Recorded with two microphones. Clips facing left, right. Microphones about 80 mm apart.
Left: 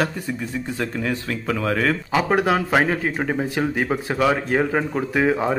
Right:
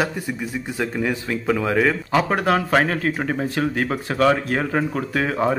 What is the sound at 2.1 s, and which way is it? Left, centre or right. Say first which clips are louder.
Speech: left 1 dB; centre.